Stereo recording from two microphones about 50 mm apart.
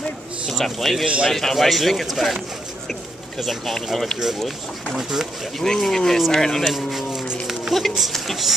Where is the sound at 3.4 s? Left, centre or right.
Centre.